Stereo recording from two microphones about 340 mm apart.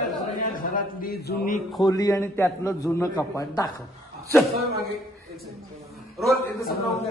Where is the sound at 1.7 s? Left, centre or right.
Centre.